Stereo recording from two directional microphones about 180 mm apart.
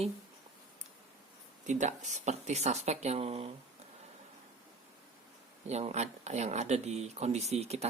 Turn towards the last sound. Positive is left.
turn(degrees=-35)  # may be behind; listen again after turning